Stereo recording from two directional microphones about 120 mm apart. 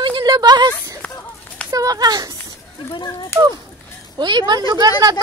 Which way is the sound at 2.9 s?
40° left (ahead or behind).